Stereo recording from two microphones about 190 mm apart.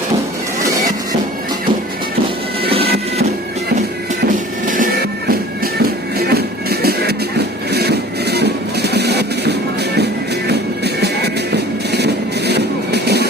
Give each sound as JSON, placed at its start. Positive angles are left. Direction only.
{"t": 4.7, "sound": "music", "side_deg": -50}
{"t": 7.7, "sound": "a sound", "side_deg": -60}
{"t": 10.8, "sound": "music", "side_deg": -60}